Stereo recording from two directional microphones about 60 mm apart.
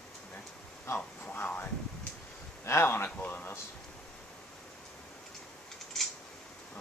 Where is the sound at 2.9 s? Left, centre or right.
Left.